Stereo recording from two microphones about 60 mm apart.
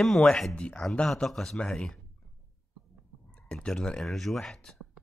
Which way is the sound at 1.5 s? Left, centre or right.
Centre.